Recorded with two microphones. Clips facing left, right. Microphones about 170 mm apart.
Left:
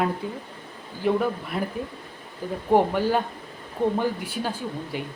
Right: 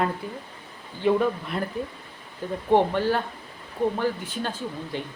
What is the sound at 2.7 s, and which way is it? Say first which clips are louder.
Speech: left 1 dB; 10° left (ahead or behind).